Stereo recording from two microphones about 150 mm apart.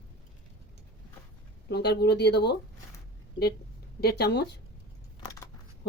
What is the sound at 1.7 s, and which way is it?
Speech, 90° left.